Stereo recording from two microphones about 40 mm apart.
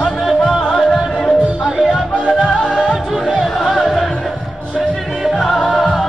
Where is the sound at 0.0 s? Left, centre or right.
Centre.